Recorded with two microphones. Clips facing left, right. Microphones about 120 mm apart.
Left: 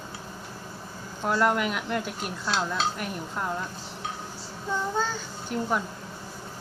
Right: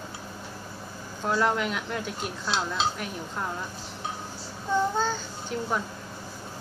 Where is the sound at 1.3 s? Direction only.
Centre (ahead or behind).